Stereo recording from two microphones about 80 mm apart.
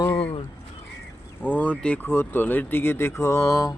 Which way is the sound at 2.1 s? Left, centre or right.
Left.